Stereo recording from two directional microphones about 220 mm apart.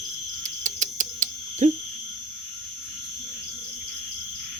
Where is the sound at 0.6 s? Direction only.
35° right (ahead or behind).